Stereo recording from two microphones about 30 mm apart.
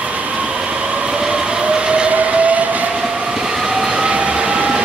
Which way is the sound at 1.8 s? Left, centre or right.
Right.